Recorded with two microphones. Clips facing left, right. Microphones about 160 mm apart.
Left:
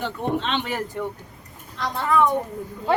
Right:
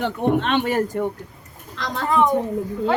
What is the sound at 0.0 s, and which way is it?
Speech, 55° right (ahead or behind).